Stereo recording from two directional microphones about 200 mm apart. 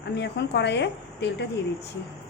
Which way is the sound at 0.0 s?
60° left (ahead or behind).